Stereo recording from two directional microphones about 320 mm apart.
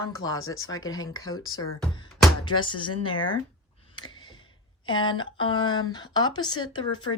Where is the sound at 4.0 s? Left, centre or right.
Centre.